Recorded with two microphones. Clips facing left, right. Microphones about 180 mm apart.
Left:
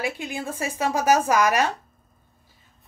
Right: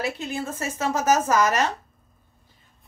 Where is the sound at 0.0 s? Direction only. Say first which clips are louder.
Right 1 dB; 10° left (ahead or behind).